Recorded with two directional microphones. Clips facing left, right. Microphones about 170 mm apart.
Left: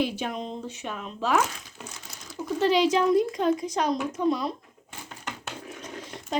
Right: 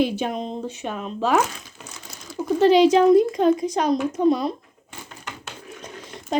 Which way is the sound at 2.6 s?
20° right (ahead or behind).